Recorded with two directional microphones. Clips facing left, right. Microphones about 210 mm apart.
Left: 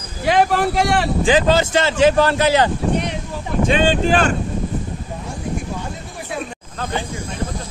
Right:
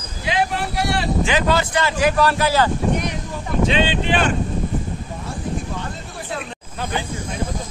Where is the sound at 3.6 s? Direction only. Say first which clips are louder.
Left 4 dB; 45° left (ahead or behind).